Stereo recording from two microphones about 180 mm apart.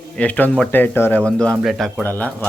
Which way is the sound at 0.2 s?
10° left (ahead or behind).